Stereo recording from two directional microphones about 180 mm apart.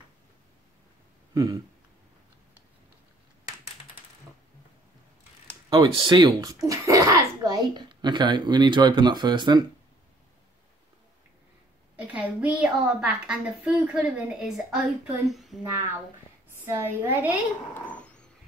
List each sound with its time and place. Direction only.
1.3 s speech: 20° right (ahead or behind)
5.7 s speech: 25° right (ahead or behind)
12.0 s a woman's voice: 5° right (ahead or behind)
16.6 s a woman's voice: 15° right (ahead or behind)
17.7 s dog: 5° left (ahead or behind)